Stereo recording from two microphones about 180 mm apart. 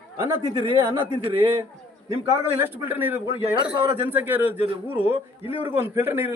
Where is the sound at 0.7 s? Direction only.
25° right (ahead or behind).